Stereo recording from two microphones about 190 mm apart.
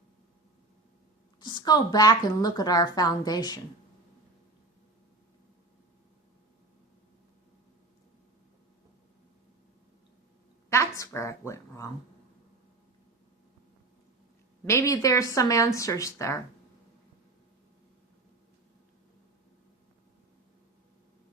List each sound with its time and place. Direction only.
1.4 s speech: 20° left (ahead or behind)
10.7 s a woman's voice: 15° left (ahead or behind)
14.6 s speech: 15° left (ahead or behind)